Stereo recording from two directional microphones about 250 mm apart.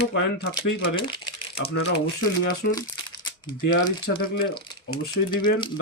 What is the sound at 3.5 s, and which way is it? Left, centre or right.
Speech, left.